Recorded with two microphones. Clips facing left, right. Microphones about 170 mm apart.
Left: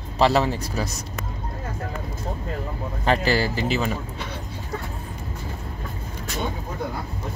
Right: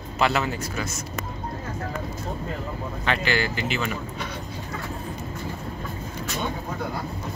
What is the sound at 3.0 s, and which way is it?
Speech, 40° left (ahead or behind).